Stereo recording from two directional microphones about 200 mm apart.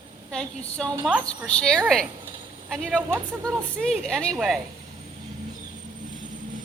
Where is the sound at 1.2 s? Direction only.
5° left (ahead or behind).